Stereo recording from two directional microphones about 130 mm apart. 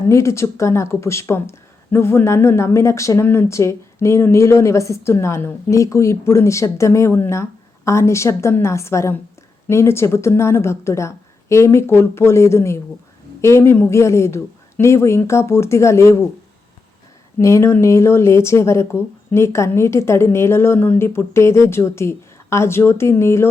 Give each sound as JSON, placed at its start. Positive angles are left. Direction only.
{"t": 0.1, "sound": "speech", "side_deg": 20}
{"t": 17.4, "sound": "speech", "side_deg": 20}